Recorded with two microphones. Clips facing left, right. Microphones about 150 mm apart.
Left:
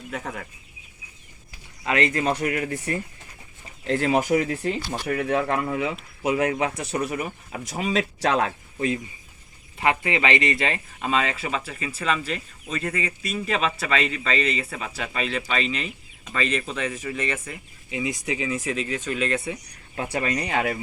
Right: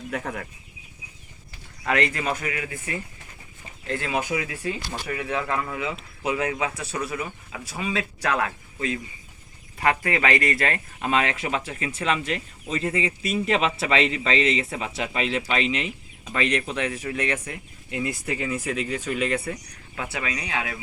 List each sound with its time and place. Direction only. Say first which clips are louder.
0.1 s speech: right 2 dB; centre (ahead or behind)
1.8 s speech: left 2 dB; 25° left (ahead or behind)
2.5 s speech: left 5 dB; 45° left (ahead or behind)
3.8 s speech: left 6 dB; 30° left (ahead or behind)
7.8 s speech: left 4 dB; 25° left (ahead or behind)
10.0 s speech: even; centre (ahead or behind)
11.1 s speech: right 1 dB; 10° right (ahead or behind)
17.4 s speech: right 1 dB; 5° left (ahead or behind)
20.1 s speech: left 6 dB; 45° left (ahead or behind)